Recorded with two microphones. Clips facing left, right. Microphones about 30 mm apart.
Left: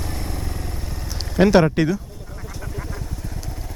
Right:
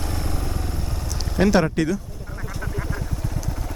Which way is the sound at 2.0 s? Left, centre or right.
Centre.